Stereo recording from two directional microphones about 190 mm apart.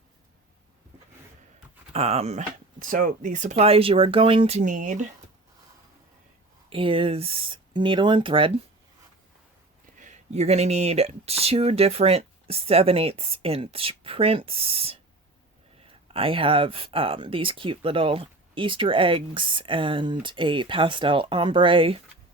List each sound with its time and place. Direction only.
1.9 s speech: 35° right (ahead or behind)
6.7 s speech: 30° right (ahead or behind)
10.0 s speech: 35° right (ahead or behind)